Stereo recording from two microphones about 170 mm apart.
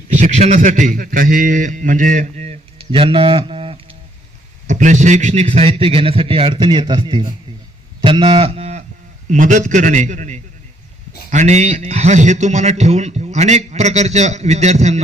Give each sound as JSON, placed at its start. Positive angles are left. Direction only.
{"t": 0.1, "sound": "a man's voice", "side_deg": -45}
{"t": 4.6, "sound": "a man's voice", "side_deg": -45}
{"t": 9.3, "sound": "a man's voice", "side_deg": -45}